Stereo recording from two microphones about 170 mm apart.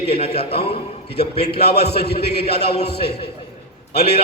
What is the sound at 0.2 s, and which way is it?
Speech, 35° left (ahead or behind).